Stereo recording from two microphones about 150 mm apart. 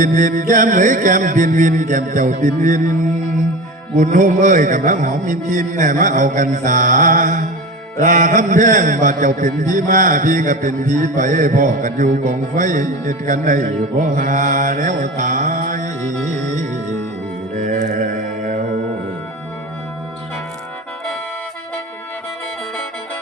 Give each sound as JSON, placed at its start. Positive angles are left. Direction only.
{"t": 0.0, "sound": "a man's voice", "side_deg": -60}
{"t": 17.6, "sound": "mantra", "side_deg": -55}